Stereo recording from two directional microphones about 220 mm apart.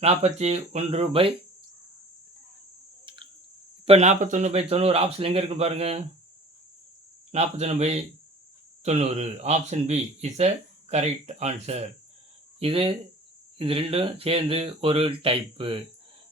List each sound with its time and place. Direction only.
0.0 s speech: 30° right (ahead or behind)
3.8 s speech: 30° right (ahead or behind)
7.3 s speech: 30° right (ahead or behind)